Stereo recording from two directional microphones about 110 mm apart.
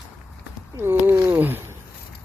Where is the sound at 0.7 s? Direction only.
20° right (ahead or behind).